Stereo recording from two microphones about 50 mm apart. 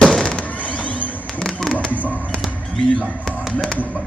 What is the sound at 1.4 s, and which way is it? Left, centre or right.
Fireworks, centre.